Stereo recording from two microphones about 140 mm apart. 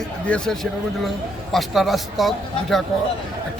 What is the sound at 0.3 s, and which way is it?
Speech, 5° left (ahead or behind).